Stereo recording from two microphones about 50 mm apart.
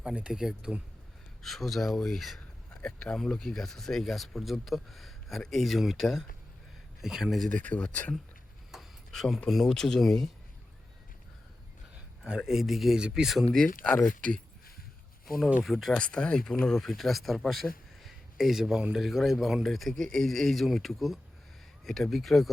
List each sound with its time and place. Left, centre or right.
0.0 s speech: centre
1.4 s speech: centre
2.8 s speech: centre
7.5 s speech: left
8.7 s a sound: centre
9.1 s speech: centre
12.2 s speech: centre
13.0 s speech: centre
13.5 s speech: centre
15.6 s speech: centre
15.9 s speech: centre